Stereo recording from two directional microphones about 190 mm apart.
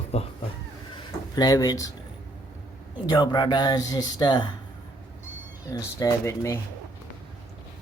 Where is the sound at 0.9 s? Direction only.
20° left (ahead or behind).